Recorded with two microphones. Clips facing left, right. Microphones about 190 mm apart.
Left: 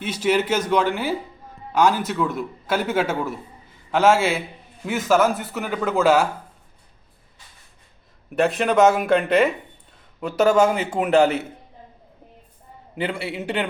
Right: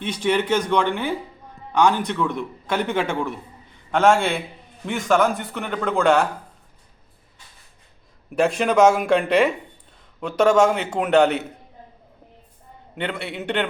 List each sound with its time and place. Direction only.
0.0 s a man's voice: 5° left (ahead or behind)
8.3 s a man's voice: centre (ahead or behind)
13.0 s a man's voice: 5° left (ahead or behind)